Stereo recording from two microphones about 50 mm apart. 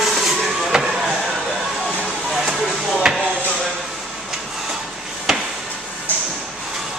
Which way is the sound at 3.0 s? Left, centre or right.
Centre.